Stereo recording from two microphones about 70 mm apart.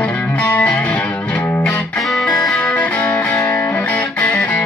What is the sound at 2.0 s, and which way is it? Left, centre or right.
Music, centre.